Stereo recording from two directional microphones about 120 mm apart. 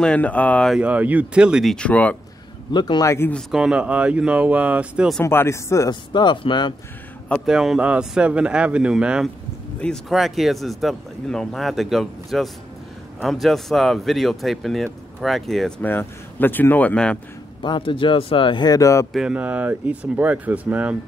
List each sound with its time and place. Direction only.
0.0 s speech: 10° left (ahead or behind)
0.7 s speech: 10° right (ahead or behind); by 2.1 s 10° left (ahead or behind)
2.7 s speech: 35° left (ahead or behind)
3.5 s speech: 5° right (ahead or behind)
5.2 s speech: 20° left (ahead or behind)
5.9 s speech: 40° left (ahead or behind)
7.4 s speech: 5° right (ahead or behind)
15.8 s speech: 15° left (ahead or behind)
17.6 s speech: 45° left (ahead or behind); by 19.0 s 25° left (ahead or behind)
19.1 s speech: 10° right (ahead or behind)